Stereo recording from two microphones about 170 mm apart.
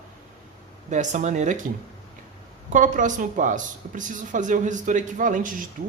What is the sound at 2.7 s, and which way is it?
A woman's voice, 50° right (ahead or behind).